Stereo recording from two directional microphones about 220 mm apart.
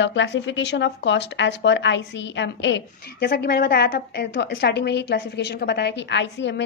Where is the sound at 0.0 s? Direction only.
55° left (ahead or behind).